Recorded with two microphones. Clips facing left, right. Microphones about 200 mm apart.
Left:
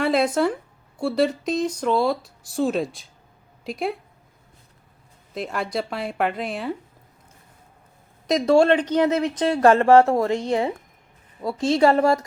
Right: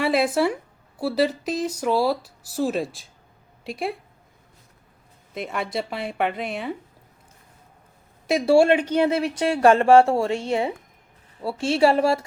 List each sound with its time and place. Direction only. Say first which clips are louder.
0.0 s a woman's voice: left 1 dB; 5° right (ahead or behind)
5.3 s speech: left 1 dB; centre (ahead or behind)
8.3 s speech: even; 10° right (ahead or behind)
9.0 s speech: left 1 dB; 30° right (ahead or behind)
9.2 s speech: even; 10° right (ahead or behind)
11.6 s speech: left 1 dB; 10° right (ahead or behind)